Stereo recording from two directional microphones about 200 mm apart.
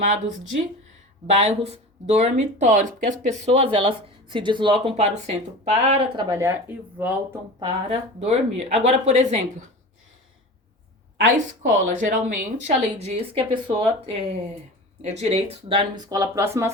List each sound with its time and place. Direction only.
0.0 s speech: 35° right (ahead or behind)
6.2 s speech: 15° right (ahead or behind)
7.6 s speech: 30° right (ahead or behind)
11.6 s speech: 40° right (ahead or behind)
15.0 s speech: 35° right (ahead or behind); by 16.7 s 15° right (ahead or behind)